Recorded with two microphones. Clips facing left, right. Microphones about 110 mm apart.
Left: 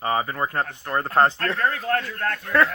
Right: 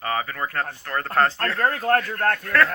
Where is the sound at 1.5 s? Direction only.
45° right (ahead or behind).